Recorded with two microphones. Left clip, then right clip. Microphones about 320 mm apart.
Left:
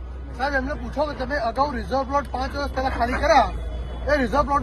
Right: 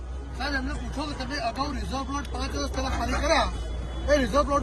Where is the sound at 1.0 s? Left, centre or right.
Centre.